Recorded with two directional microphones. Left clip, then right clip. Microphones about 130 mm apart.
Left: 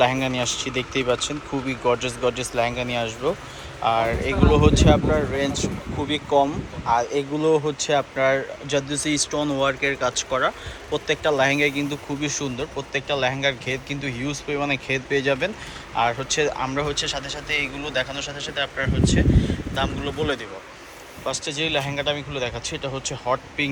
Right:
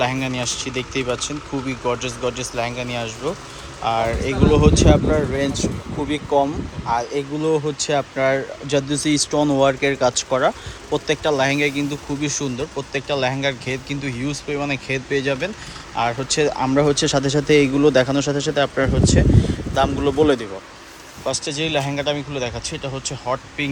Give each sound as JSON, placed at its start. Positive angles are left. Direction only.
{"t": 0.0, "sound": "speech", "side_deg": -10}
{"t": 8.9, "sound": "speech", "side_deg": -30}
{"t": 16.3, "sound": "speech", "side_deg": -30}
{"t": 16.8, "sound": "speech", "side_deg": -60}
{"t": 21.2, "sound": "speech", "side_deg": -30}